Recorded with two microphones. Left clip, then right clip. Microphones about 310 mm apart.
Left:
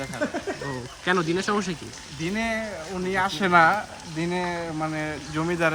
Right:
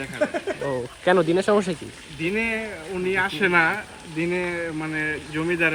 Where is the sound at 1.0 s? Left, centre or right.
Centre.